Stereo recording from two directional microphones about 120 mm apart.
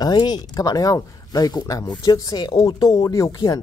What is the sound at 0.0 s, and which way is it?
Speech, 35° left (ahead or behind).